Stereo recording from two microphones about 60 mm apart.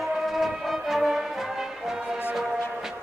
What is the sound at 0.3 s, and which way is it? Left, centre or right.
Music, centre.